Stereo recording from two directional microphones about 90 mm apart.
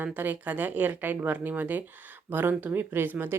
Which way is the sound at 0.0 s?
20° right (ahead or behind).